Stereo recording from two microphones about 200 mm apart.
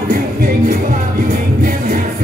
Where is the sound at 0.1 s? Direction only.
50° right (ahead or behind).